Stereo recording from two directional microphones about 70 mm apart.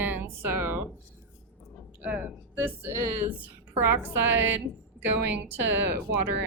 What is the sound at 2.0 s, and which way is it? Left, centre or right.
Speech, right.